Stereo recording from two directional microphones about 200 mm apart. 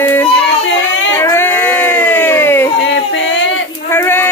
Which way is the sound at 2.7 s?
65° left (ahead or behind).